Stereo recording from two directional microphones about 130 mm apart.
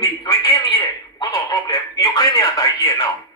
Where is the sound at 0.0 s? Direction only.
30° left (ahead or behind).